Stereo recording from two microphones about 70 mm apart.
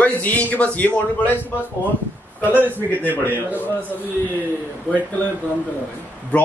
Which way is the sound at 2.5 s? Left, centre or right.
Right.